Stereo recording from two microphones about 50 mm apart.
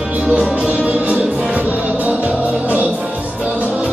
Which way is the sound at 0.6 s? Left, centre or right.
Right.